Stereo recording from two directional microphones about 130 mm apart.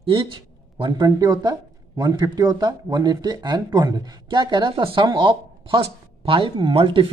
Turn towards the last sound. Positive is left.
turn(degrees=-40)  # may be behind; listen again after turning